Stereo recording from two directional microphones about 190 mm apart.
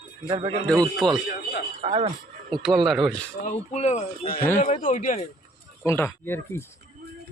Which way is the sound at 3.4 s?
35° left (ahead or behind).